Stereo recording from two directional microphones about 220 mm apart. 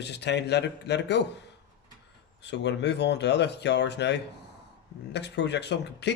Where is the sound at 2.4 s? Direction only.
50° left (ahead or behind).